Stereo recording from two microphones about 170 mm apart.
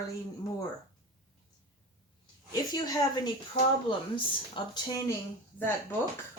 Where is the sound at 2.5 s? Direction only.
20° left (ahead or behind).